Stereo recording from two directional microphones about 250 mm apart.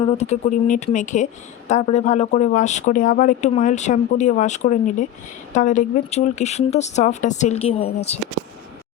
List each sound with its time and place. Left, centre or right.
0.0 s speech: left